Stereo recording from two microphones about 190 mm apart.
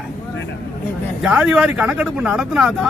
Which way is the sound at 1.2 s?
5° right (ahead or behind).